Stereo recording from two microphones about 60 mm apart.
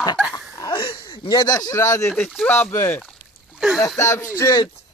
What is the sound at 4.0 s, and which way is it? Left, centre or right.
Speech, left.